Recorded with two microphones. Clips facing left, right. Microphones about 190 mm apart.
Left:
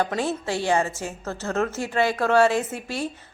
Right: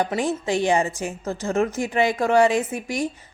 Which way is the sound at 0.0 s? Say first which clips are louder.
Right 2 dB; 15° right (ahead or behind).